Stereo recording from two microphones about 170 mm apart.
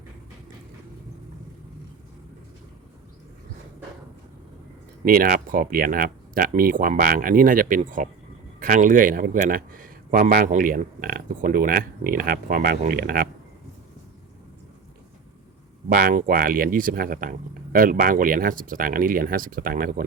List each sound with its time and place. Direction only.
5.0 s speech: 55° right (ahead or behind)
15.9 s speech: 50° right (ahead or behind)